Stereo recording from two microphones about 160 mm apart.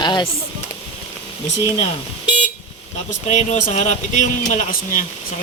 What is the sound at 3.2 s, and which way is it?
Speech, 45° left (ahead or behind).